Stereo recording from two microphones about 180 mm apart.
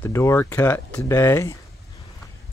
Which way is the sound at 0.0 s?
15° left (ahead or behind).